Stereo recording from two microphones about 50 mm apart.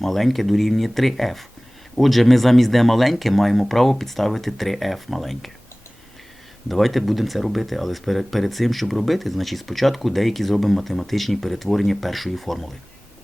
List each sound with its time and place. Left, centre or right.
0.0 s speech: centre
6.7 s speech: centre